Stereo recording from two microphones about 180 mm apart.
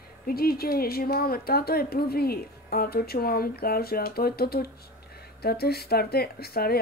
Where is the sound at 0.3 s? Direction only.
55° left (ahead or behind).